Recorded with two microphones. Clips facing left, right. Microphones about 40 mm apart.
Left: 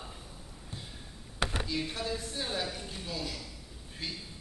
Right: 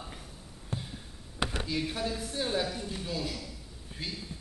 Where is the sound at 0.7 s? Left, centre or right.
Right.